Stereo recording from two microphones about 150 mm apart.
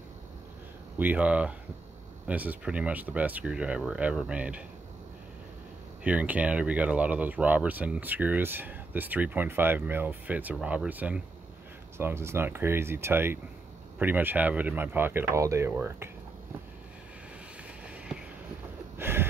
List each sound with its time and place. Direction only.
0.9 s speech: 10° right (ahead or behind)
6.0 s speech: 10° right (ahead or behind)
17.8 s a sound: 5° right (ahead or behind)